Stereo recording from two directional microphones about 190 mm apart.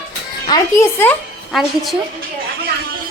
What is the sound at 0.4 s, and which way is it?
Speech, 20° left (ahead or behind).